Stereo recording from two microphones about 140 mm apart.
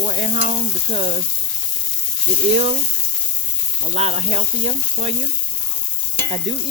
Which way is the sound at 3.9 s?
50° right (ahead or behind).